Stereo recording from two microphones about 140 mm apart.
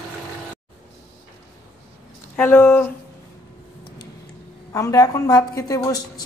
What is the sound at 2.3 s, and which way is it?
Speech, 15° left (ahead or behind).